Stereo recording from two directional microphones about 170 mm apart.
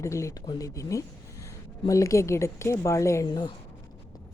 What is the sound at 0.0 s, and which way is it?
Speech, 15° left (ahead or behind).